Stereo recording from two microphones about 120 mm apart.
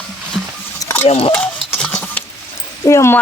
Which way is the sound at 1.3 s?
10° left (ahead or behind).